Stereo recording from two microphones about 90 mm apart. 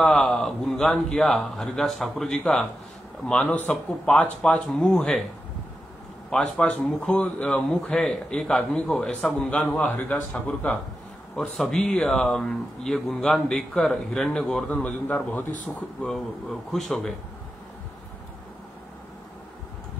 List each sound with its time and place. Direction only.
0.0 s a man's voice: 5° left (ahead or behind)
6.3 s speech: 10° left (ahead or behind)
11.5 s speech: 5° left (ahead or behind)